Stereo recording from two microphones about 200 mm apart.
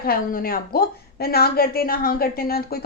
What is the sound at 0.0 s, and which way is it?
A woman's voice, 45° left (ahead or behind).